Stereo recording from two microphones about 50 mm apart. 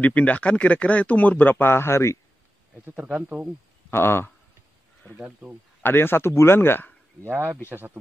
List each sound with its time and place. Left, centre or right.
0.0 s speech: left
3.2 s speech: right
3.9 s speech: left
5.4 s speech: right
5.8 s speech: left
7.2 s speech: right